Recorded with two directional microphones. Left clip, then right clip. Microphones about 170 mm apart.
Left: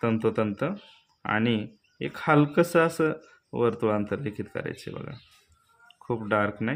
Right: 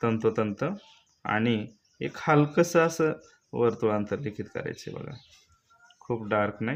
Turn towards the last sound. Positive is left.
turn(degrees=5)  # may be behind; listen again after turning